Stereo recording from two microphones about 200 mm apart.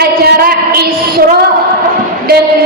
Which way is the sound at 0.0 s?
50° right (ahead or behind).